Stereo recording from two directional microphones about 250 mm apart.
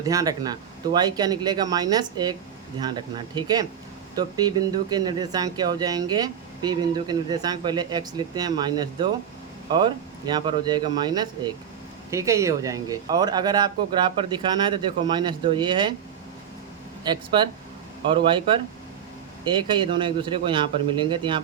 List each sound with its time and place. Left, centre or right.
0.0 s speech: centre
17.0 s a man's voice: centre